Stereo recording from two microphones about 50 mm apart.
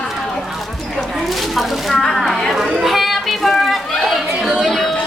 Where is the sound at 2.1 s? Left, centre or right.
Centre.